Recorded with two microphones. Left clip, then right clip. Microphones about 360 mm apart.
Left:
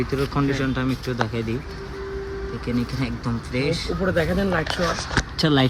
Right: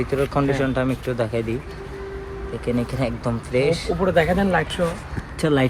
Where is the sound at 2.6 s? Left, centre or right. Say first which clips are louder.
Right 5 dB; centre.